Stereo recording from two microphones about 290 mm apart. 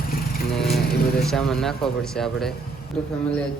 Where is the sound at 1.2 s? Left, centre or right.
Centre.